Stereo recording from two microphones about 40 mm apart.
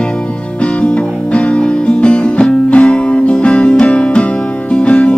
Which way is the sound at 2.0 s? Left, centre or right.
Left.